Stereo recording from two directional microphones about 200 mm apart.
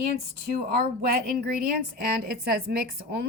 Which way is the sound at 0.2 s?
50° right (ahead or behind).